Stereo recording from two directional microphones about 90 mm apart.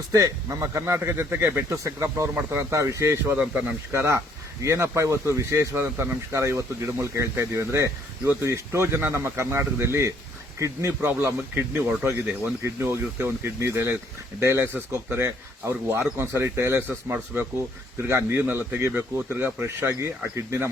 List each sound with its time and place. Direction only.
0.1 s speech: 40° right (ahead or behind)
1.8 s speech: 35° right (ahead or behind)
2.3 s speech: 25° right (ahead or behind)
3.3 s speech: 15° right (ahead or behind)
3.9 s speech: 30° right (ahead or behind)
17.9 s speech: 30° right (ahead or behind)